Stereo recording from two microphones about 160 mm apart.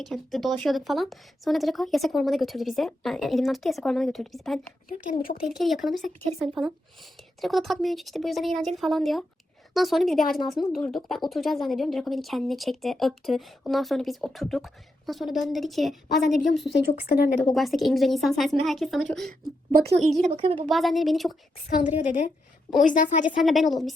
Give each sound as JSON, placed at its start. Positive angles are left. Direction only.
{"t": 0.0, "sound": "speech", "side_deg": 0}
{"t": 16.7, "sound": "speech", "side_deg": 70}
{"t": 17.5, "sound": "speech", "side_deg": 0}
{"t": 19.7, "sound": "a woman's voice", "side_deg": -85}
{"t": 20.2, "sound": "a woman's voice", "side_deg": -45}
{"t": 20.7, "sound": "speech", "side_deg": 0}
{"t": 21.8, "sound": "a woman's voice", "side_deg": 50}
{"t": 23.2, "sound": "speech", "side_deg": 0}